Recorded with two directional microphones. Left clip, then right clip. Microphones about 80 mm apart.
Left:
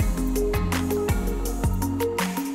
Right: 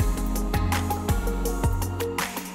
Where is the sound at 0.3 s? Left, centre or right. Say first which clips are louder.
Left 4 dB; centre.